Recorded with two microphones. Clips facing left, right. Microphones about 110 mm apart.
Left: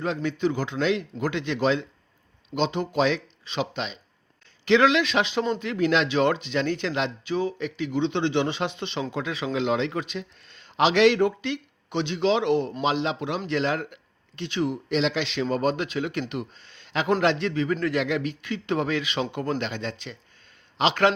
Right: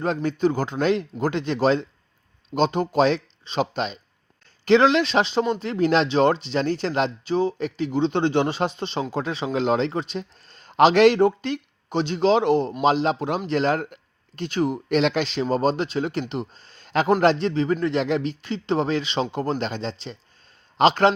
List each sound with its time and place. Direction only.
0.0 s a man's voice: 40° right (ahead or behind)